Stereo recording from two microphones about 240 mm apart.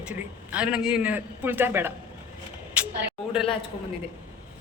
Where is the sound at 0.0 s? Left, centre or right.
Centre.